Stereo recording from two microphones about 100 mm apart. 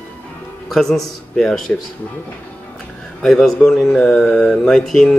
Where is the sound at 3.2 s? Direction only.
5° left (ahead or behind).